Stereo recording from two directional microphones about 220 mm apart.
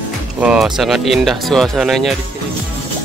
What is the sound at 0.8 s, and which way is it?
Speech, centre (ahead or behind).